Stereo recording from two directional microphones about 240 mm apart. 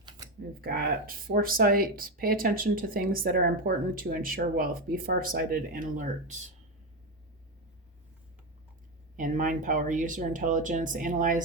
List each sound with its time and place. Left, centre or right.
0.6 s speech: right
9.1 s speech: right